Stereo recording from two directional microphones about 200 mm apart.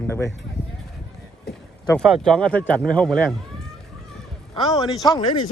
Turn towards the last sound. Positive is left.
turn(degrees=20)  # may be behind; listen again after turning